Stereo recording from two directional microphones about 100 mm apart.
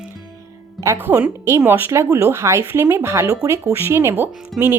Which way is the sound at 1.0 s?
20° right (ahead or behind).